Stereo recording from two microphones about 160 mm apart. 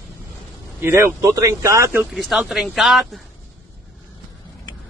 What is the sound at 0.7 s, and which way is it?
Speech, 15° right (ahead or behind).